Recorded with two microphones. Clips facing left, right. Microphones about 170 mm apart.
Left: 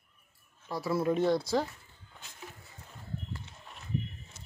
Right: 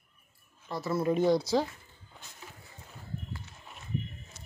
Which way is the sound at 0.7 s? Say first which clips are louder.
Even; 10° left (ahead or behind).